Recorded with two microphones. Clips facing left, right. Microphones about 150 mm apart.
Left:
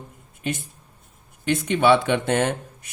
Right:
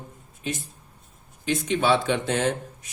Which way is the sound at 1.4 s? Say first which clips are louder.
Left 4 dB; 60° left (ahead or behind).